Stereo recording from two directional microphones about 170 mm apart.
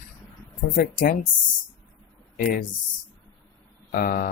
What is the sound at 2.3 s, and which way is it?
Speech, 55° left (ahead or behind).